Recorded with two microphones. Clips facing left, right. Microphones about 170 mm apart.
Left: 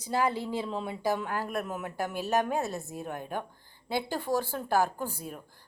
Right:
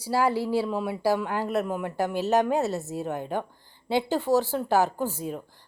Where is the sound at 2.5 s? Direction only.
75° right (ahead or behind).